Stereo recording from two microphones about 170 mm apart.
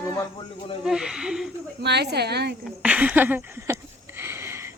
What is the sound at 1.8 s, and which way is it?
Speech, 80° right.